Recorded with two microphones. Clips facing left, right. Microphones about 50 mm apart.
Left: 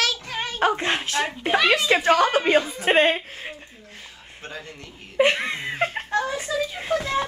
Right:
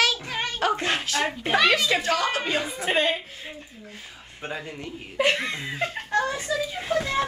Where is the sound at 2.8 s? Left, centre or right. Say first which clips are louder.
Left 5 dB; left.